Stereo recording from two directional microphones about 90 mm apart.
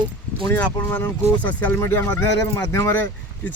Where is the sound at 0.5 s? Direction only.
25° left (ahead or behind).